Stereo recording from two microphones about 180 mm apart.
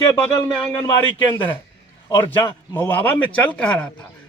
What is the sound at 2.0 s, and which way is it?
A man's voice, 20° left (ahead or behind).